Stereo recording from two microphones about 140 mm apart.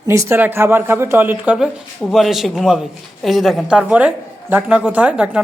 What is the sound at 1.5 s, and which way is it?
A woman's voice, centre (ahead or behind).